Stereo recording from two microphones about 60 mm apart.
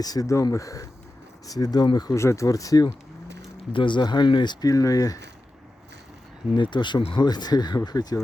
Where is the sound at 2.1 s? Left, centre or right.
Left.